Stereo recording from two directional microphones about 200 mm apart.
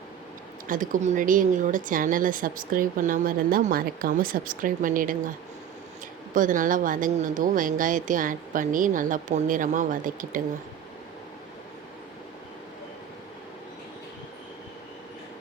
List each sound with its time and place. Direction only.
0.7 s a woman's voice: 40° right (ahead or behind)
6.3 s a woman's voice: 40° right (ahead or behind)